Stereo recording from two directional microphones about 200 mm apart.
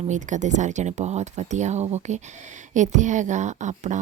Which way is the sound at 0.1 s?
40° right (ahead or behind).